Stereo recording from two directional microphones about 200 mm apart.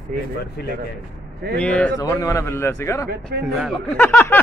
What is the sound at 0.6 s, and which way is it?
Speech, 55° left (ahead or behind).